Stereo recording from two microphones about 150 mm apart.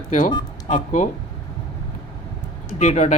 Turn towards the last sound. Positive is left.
turn(degrees=50)  # may be behind; listen again after turning